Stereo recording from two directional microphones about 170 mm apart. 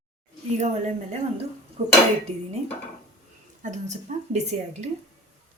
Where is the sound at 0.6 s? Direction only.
45° right (ahead or behind).